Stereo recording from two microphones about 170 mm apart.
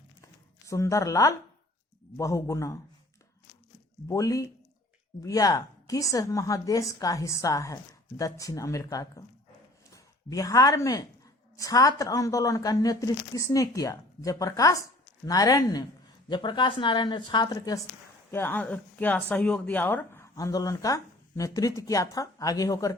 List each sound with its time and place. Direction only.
0.7 s a woman's voice: 20° left (ahead or behind)
4.1 s speech: 20° left (ahead or behind)
18.3 s speech: 15° left (ahead or behind)